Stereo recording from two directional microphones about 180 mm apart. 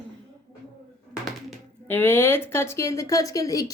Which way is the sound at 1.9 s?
10° left (ahead or behind).